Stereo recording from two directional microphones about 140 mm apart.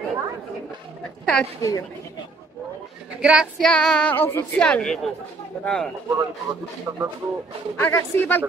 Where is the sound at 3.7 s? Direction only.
5° left (ahead or behind).